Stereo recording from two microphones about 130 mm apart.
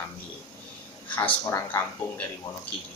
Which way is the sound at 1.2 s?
20° left (ahead or behind).